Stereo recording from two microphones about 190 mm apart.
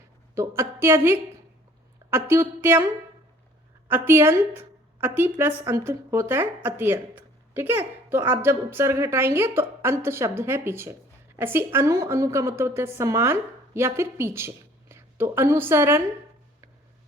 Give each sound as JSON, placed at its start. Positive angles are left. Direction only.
{"t": 0.3, "sound": "a woman's voice", "side_deg": -15}
{"t": 3.8, "sound": "a woman's voice", "side_deg": -10}